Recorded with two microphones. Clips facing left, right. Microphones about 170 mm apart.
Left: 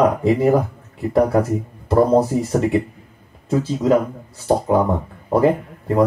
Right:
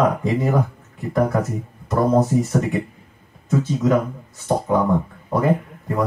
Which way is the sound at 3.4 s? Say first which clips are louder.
Left 2 dB; 35° left (ahead or behind).